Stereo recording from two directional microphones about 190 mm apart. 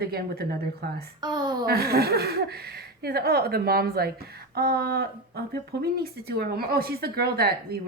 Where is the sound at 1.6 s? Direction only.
55° right (ahead or behind).